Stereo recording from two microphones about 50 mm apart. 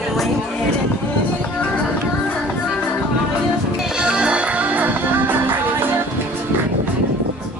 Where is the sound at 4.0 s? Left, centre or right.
Centre.